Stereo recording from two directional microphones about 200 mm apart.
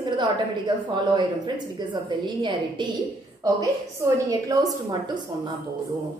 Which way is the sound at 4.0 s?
15° right (ahead or behind).